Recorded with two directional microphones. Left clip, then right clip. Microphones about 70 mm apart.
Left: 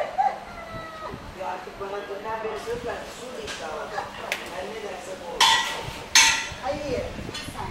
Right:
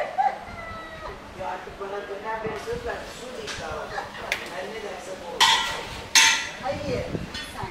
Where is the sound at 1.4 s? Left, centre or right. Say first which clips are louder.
Even; centre.